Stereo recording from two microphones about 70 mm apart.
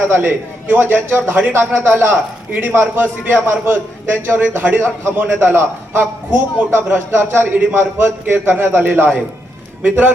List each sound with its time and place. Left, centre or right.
0.1 s a man's voice: right